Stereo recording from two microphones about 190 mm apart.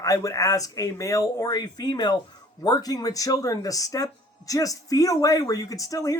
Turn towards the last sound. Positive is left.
turn(degrees=20)  # may be behind; listen again after turning